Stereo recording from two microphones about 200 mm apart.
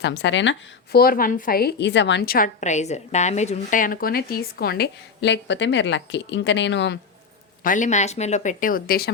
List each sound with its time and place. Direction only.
0.0 s a woman's voice: 60° left (ahead or behind)
0.9 s a woman's voice: 45° left (ahead or behind)
7.6 s a woman's voice: 40° left (ahead or behind)